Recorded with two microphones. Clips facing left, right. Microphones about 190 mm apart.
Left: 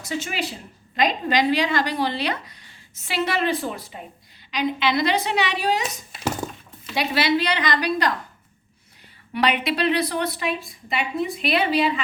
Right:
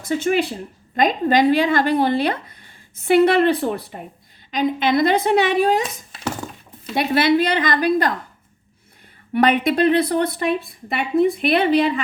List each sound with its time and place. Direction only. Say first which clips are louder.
0.0 s a woman's voice: right 9 dB; 55° right (ahead or behind)
6.9 s speech: right 5 dB; 55° right (ahead or behind)
9.3 s speech: right 6 dB; 50° right (ahead or behind)